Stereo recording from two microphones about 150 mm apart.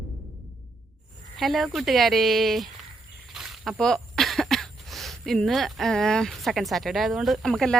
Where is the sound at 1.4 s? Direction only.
Centre (ahead or behind).